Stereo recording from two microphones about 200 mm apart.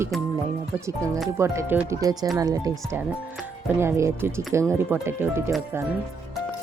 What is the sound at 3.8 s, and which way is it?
Speech, 15° right (ahead or behind).